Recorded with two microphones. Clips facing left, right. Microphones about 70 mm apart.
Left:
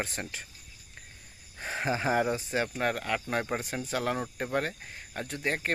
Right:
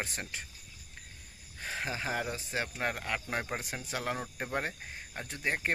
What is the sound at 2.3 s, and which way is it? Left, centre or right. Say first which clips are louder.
Speech: left 5 dB; centre.